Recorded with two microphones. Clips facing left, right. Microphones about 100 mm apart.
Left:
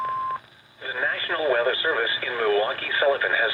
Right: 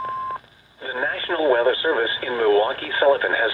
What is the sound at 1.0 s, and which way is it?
Speech, 35° right (ahead or behind).